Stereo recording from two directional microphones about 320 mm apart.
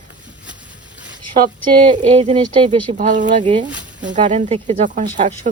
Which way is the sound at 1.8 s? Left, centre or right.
Right.